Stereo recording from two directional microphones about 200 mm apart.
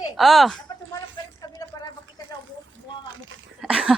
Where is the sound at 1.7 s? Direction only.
15° left (ahead or behind).